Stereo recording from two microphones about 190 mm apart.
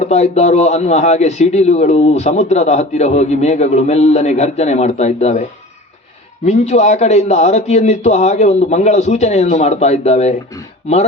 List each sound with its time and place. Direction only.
0.0 s speech: 35° left (ahead or behind)